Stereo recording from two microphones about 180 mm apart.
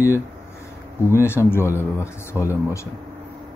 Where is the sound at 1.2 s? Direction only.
15° left (ahead or behind).